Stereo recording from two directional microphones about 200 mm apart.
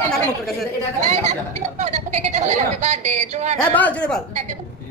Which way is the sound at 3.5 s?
5° left (ahead or behind).